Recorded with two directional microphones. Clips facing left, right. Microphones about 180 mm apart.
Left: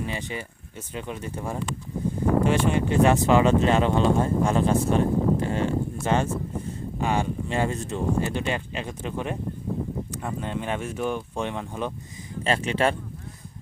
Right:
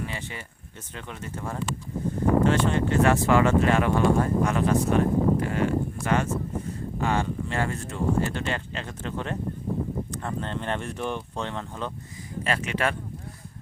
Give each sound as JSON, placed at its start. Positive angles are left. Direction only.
{"t": 0.0, "sound": "a sound", "side_deg": 20}
{"t": 0.9, "sound": "speech", "side_deg": 15}
{"t": 7.0, "sound": "speech", "side_deg": 15}
{"t": 12.4, "sound": "speech", "side_deg": 30}